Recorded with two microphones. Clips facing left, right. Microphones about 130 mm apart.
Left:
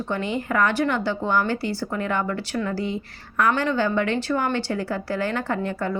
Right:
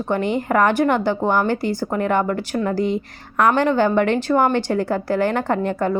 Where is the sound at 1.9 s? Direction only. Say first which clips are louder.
Right 7 dB; 55° right (ahead or behind).